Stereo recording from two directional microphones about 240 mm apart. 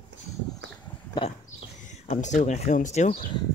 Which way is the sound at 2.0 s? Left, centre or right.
Left.